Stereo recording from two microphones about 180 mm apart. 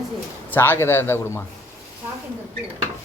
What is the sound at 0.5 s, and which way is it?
Speech, 10° left (ahead or behind).